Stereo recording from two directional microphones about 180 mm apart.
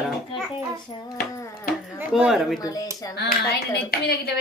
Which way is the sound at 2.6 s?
20° left (ahead or behind).